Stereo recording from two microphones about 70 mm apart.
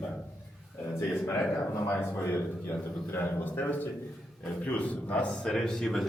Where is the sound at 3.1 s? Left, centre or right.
Left.